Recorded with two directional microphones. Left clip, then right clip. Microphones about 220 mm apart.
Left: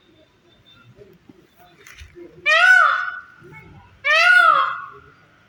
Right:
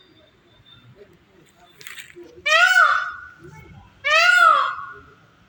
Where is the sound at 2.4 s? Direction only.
Centre (ahead or behind).